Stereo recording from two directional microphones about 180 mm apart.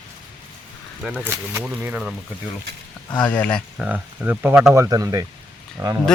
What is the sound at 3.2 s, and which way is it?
Speech, 10° left (ahead or behind).